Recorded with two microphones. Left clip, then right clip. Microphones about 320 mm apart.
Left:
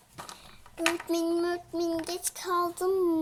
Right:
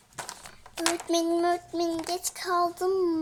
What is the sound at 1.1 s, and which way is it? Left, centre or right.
Child singing, centre.